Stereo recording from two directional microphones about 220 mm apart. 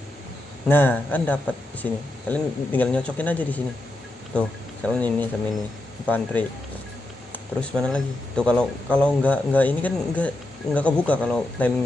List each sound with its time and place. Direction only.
0.7 s speech: 10° left (ahead or behind)